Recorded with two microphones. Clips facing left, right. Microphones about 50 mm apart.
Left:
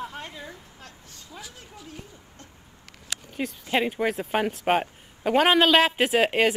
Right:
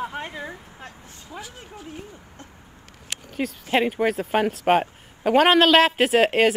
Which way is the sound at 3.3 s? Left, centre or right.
Centre.